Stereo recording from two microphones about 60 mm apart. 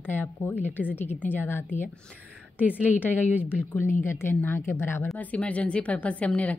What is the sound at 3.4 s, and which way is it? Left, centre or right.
A woman's voice, left.